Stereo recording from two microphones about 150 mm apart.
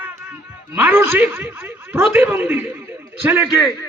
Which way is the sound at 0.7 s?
10° right (ahead or behind).